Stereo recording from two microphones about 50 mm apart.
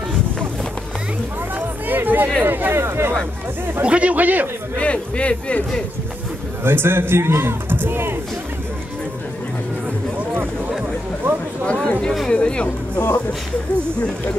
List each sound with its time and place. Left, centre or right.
1.9 s music: right
2.4 s a man's voice: right
3.8 s speech: right
4.7 s a man's voice: left
6.6 s a man's voice: right
11.3 s a sound: right
11.6 s chatter: centre
12.3 s music: centre